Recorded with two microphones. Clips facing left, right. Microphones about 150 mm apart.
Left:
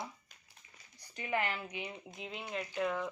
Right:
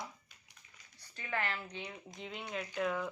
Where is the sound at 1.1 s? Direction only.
15° left (ahead or behind); by 3.1 s centre (ahead or behind).